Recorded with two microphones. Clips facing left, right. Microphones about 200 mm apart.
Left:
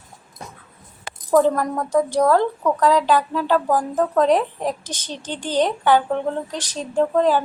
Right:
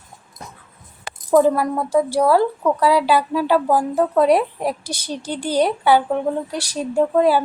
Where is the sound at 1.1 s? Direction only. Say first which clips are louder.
Right 1 dB; 65° right (ahead or behind).